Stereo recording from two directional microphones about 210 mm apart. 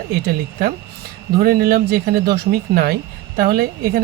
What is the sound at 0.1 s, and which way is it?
Speech, 45° right (ahead or behind).